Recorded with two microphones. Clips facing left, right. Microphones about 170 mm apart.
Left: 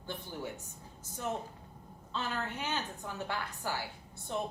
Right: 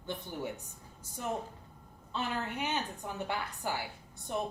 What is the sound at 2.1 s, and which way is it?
A woman's voice, 15° right (ahead or behind).